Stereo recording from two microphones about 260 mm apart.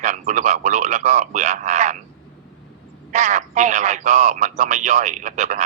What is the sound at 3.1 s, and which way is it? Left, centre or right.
A man's voice, right.